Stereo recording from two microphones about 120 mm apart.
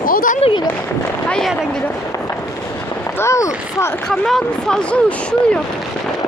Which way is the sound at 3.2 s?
25° left (ahead or behind).